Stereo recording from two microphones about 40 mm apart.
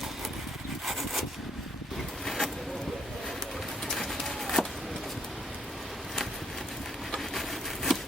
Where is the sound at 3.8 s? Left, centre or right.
Centre.